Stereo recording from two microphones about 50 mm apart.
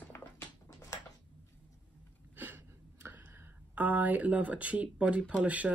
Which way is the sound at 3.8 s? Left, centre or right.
Right.